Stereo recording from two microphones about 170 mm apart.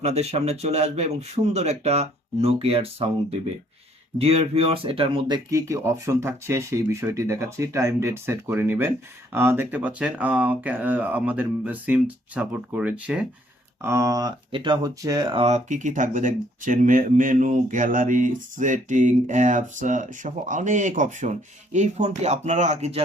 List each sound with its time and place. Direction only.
0.0 s speech: 40° right (ahead or behind)
4.2 s speech: 35° right (ahead or behind)
5.5 s speech: 20° right (ahead or behind); by 23.0 s 40° right (ahead or behind)